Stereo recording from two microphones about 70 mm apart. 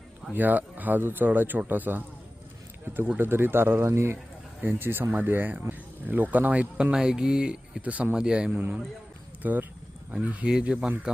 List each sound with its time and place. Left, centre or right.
0.3 s speech: right
9.4 s speech: right